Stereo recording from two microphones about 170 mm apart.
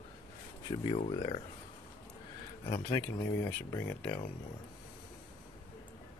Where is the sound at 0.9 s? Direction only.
35° left (ahead or behind).